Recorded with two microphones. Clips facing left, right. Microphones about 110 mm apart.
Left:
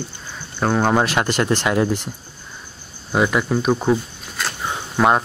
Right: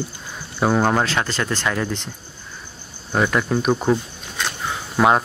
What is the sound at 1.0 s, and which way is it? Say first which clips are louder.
Speech: left 3 dB; 15° left (ahead or behind).